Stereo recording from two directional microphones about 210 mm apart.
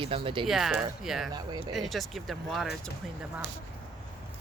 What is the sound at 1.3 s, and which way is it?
Speech, 20° right (ahead or behind).